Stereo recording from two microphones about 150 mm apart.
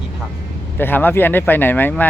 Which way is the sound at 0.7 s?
15° left (ahead or behind).